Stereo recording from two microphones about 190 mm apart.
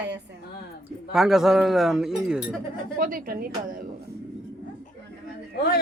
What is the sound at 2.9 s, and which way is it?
Speech, 50° right (ahead or behind).